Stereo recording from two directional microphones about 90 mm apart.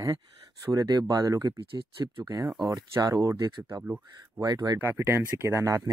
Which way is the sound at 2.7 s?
45° right (ahead or behind).